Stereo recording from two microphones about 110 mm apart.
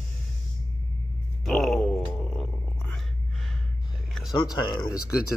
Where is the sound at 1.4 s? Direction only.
5° left (ahead or behind).